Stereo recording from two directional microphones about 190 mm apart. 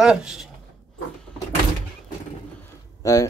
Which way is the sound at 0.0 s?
5° right (ahead or behind).